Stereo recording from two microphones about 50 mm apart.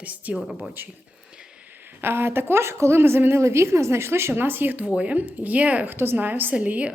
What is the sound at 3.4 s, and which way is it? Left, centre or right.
Speech, right.